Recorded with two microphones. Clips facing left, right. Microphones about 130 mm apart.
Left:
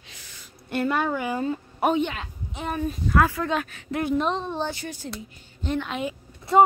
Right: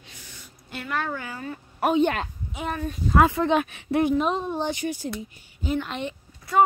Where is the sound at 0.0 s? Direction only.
90° left.